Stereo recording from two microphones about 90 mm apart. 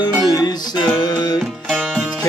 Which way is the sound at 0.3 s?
45° left (ahead or behind).